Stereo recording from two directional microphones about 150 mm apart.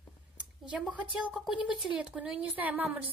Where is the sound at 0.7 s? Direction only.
10° right (ahead or behind).